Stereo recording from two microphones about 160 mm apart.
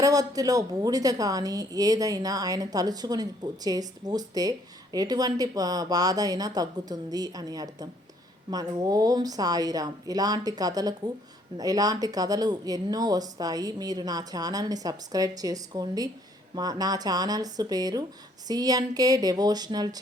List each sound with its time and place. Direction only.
0.0 s a woman's voice: 20° right (ahead or behind)